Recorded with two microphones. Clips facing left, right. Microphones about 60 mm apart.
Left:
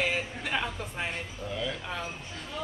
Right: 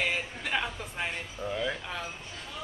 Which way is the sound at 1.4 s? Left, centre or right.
Right.